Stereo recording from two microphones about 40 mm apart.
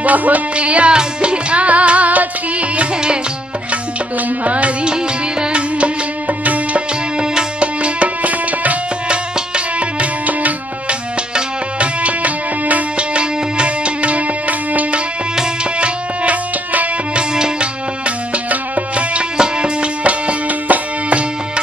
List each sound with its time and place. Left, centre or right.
0.0 s music: right
4.5 s music: right
4.8 s music: right
6.2 s music: right
7.2 s music: right
9.8 s music: right
12.9 s music: right
18.5 s music: right
19.3 s music: right